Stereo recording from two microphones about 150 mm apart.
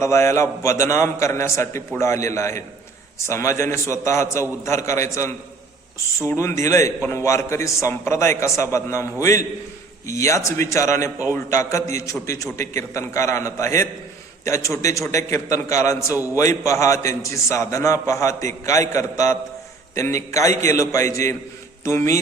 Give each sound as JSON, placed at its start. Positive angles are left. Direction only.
{"t": 0.0, "sound": "a man's voice", "side_deg": 20}
{"t": 10.1, "sound": "a man's voice", "side_deg": 20}
{"t": 16.1, "sound": "a man's voice", "side_deg": -15}
{"t": 16.4, "sound": "a man's voice", "side_deg": 20}
{"t": 20.7, "sound": "a man's voice", "side_deg": 20}